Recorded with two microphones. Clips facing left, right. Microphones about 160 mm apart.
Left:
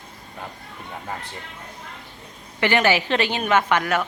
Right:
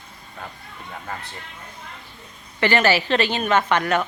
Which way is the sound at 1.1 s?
15° left (ahead or behind).